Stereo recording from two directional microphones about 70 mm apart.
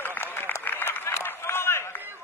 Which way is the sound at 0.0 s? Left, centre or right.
Left.